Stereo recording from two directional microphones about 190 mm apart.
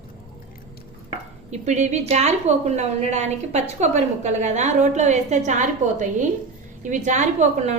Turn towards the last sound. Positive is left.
turn(degrees=-35)  # may be behind; listen again after turning